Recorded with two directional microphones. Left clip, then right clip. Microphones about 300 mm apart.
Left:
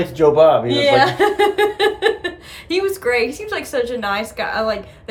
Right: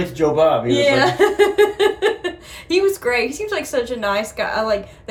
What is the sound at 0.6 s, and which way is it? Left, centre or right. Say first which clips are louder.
A woman's voice: left 1 dB; centre.